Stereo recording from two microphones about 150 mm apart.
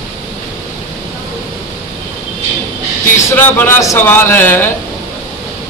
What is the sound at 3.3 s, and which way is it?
Speech, 15° left (ahead or behind).